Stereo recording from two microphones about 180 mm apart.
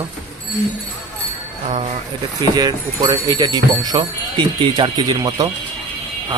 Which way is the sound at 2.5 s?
20° right (ahead or behind).